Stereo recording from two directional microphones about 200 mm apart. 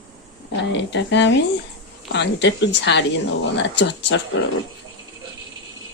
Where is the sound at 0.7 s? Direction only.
60° left (ahead or behind).